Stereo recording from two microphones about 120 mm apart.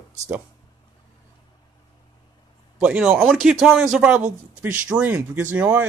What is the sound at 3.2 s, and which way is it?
Speech, centre (ahead or behind).